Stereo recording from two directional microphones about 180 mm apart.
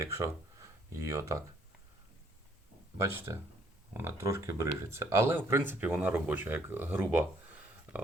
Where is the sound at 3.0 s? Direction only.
15° right (ahead or behind).